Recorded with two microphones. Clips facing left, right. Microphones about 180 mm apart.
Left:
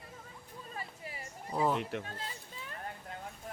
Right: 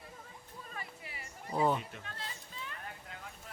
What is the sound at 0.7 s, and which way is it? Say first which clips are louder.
Music: left 3 dB; 35° left (ahead or behind).